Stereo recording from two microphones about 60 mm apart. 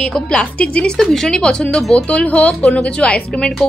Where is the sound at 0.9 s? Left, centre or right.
Centre.